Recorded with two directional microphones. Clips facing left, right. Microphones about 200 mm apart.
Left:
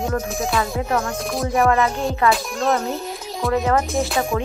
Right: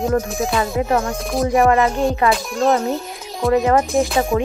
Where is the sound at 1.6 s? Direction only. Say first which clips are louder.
Right 2 dB; 30° right (ahead or behind).